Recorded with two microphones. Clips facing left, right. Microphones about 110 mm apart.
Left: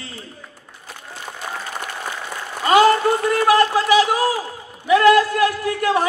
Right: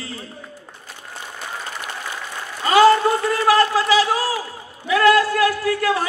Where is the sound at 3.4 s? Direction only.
20° left (ahead or behind).